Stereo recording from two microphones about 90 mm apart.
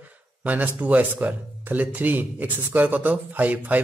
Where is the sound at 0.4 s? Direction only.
15° right (ahead or behind).